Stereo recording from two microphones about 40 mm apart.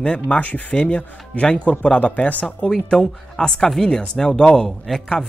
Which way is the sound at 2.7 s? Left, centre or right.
Centre.